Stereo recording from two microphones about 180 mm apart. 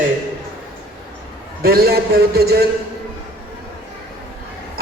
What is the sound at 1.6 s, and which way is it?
A man's voice, 60° right (ahead or behind).